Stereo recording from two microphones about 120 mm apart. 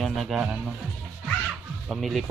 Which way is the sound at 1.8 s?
Centre (ahead or behind).